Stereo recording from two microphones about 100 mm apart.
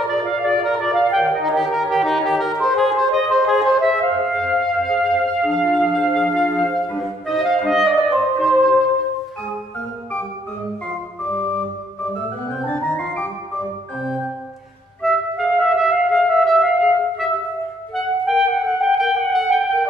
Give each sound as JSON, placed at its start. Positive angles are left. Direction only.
{"t": 0.1, "sound": "clarinet", "side_deg": 0}
{"t": 11.2, "sound": "organ", "side_deg": 15}
{"t": 12.6, "sound": "music", "side_deg": 15}
{"t": 15.0, "sound": "music", "side_deg": 0}
{"t": 17.9, "sound": "clarinet", "side_deg": 0}